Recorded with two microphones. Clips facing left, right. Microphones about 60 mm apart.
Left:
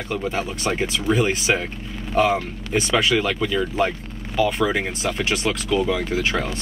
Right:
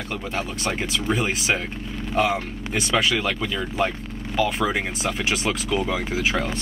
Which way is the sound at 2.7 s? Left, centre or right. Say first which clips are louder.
Left 3 dB; centre.